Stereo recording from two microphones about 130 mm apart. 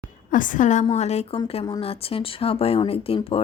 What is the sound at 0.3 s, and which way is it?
A woman's voice, 90° left.